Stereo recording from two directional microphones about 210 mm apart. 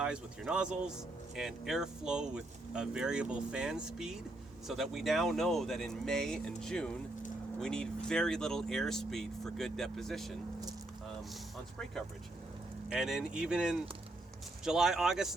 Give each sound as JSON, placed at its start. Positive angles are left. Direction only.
{"t": 0.0, "sound": "speech", "side_deg": -5}
{"t": 12.9, "sound": "speech", "side_deg": -5}